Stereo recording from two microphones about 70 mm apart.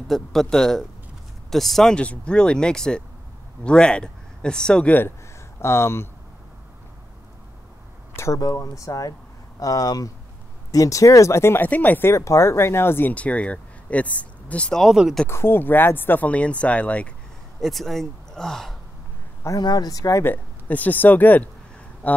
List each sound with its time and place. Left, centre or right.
0.1 s speech: centre
2.0 s speech: centre
5.6 s speech: left
8.2 s speech: left
10.7 s speech: left
11.6 s speech: left
12.1 s speech: left
13.1 s speech: centre
15.2 s speech: left; by 17.1 s centre
17.6 s speech: centre
19.6 s speech: left
20.2 s speech: left